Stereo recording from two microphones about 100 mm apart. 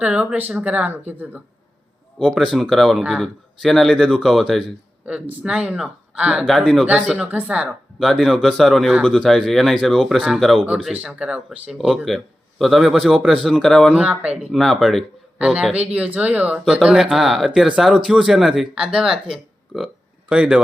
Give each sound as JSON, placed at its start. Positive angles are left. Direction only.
{"t": 0.0, "sound": "speech", "side_deg": -10}
{"t": 2.1, "sound": "speech", "side_deg": 5}
{"t": 5.0, "sound": "speech", "side_deg": -15}
{"t": 7.9, "sound": "speech", "side_deg": 0}
{"t": 10.9, "sound": "speech", "side_deg": -15}
{"t": 12.0, "sound": "speech", "side_deg": 0}
{"t": 13.9, "sound": "speech", "side_deg": -15}
{"t": 14.5, "sound": "speech", "side_deg": 0}
{"t": 15.4, "sound": "speech", "side_deg": -10}